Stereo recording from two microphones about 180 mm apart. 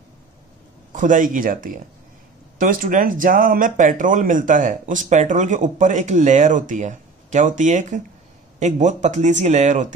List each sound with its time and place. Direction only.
0.9 s speech: 45° right (ahead or behind)